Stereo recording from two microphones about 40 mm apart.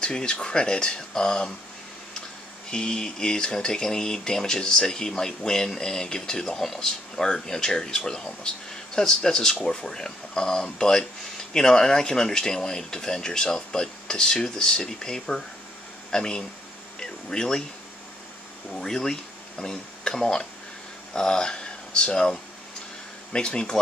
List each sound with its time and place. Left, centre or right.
0.0 s speech: left
2.7 s speech: centre
18.7 s speech: centre
23.3 s speech: left